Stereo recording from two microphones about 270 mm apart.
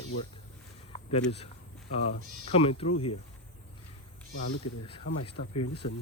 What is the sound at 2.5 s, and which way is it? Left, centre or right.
Speech, left.